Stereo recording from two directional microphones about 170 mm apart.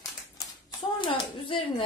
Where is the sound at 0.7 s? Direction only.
30° left (ahead or behind).